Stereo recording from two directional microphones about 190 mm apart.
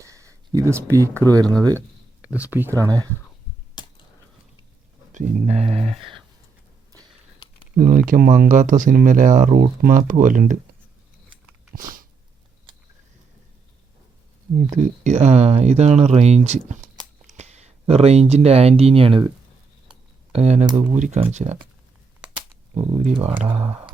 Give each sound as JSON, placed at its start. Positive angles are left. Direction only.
{"t": 0.0, "sound": "a sound", "side_deg": -15}
{"t": 0.9, "sound": "speech", "side_deg": -15}
{"t": 2.2, "sound": "speech", "side_deg": -10}
{"t": 3.8, "sound": "a sound", "side_deg": 25}
{"t": 5.1, "sound": "speech", "side_deg": -40}
{"t": 7.8, "sound": "speech", "side_deg": -45}
{"t": 11.7, "sound": "a sound", "side_deg": -45}
{"t": 14.8, "sound": "speech", "side_deg": -40}
{"t": 20.3, "sound": "speech", "side_deg": -35}
{"t": 22.7, "sound": "speech", "side_deg": -35}